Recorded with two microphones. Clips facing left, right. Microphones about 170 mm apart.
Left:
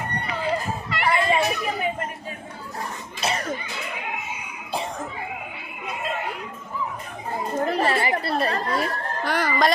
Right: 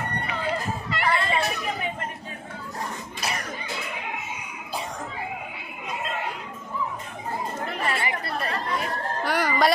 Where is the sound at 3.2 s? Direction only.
25° left (ahead or behind).